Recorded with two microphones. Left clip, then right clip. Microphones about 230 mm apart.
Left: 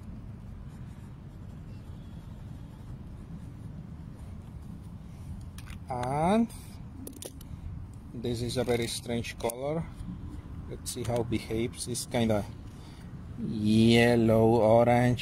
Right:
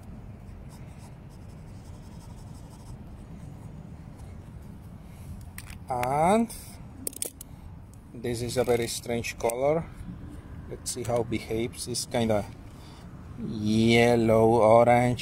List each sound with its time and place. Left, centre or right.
5.9 s speech: centre
8.2 s speech: centre
13.5 s speech: centre